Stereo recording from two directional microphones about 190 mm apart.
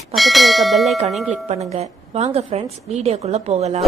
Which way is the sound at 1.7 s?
35° right (ahead or behind).